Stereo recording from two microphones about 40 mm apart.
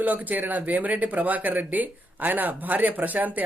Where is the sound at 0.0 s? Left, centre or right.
Right.